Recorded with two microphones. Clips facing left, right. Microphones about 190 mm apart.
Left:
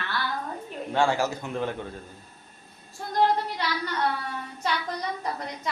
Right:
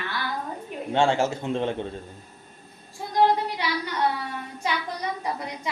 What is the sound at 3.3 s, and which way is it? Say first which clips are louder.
Speech: right 2 dB; 10° right (ahead or behind).